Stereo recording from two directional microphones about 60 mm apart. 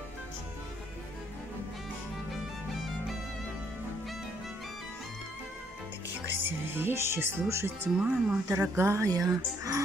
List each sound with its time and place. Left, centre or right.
6.4 s speech: right
7.9 s speech: centre
8.5 s speech: right